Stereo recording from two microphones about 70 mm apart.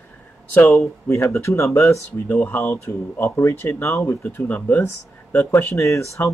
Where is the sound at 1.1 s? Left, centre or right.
Left.